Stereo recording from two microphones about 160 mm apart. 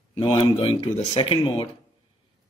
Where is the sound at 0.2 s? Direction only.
35° left (ahead or behind).